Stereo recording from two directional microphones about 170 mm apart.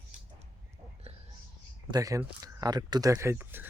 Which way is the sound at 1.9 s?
20° right (ahead or behind).